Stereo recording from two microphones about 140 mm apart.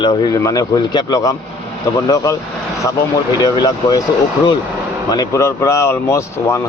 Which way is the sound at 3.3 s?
30° left (ahead or behind).